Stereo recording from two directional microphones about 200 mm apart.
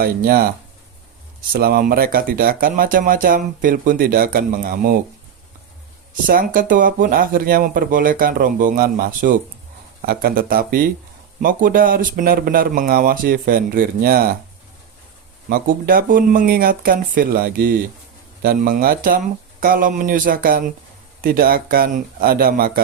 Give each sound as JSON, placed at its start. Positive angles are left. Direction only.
{"t": 0.0, "sound": "speech", "side_deg": -50}
{"t": 1.5, "sound": "speech", "side_deg": -50}
{"t": 6.2, "sound": "speech", "side_deg": -45}
{"t": 15.4, "sound": "speech", "side_deg": -45}